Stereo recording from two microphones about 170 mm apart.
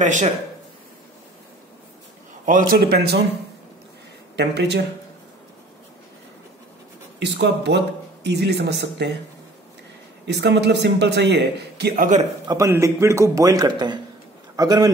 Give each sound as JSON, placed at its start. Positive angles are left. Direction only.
{"t": 0.0, "sound": "a man's voice", "side_deg": -45}
{"t": 2.4, "sound": "a man's voice", "side_deg": -55}
{"t": 4.4, "sound": "speech", "side_deg": -80}
{"t": 7.2, "sound": "speech", "side_deg": -90}
{"t": 10.2, "sound": "speech", "side_deg": -85}
{"t": 11.9, "sound": "a man's voice", "side_deg": -50}
{"t": 12.4, "sound": "a man's voice", "side_deg": -15}